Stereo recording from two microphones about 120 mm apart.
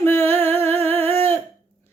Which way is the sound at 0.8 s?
15° left (ahead or behind).